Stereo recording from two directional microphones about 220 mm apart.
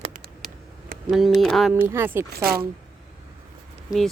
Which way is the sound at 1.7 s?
10° right (ahead or behind).